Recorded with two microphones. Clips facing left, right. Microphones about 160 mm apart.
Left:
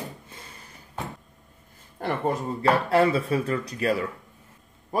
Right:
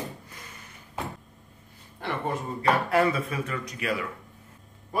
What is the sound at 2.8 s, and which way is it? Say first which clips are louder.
Speech: left 3 dB; 30° left (ahead or behind).